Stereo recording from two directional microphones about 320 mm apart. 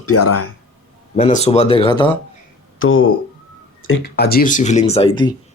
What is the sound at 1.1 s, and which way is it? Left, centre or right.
Speech, centre.